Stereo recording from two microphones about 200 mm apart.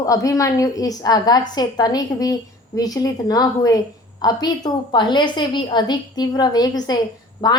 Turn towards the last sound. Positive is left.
turn(degrees=20)  # may be behind; listen again after turning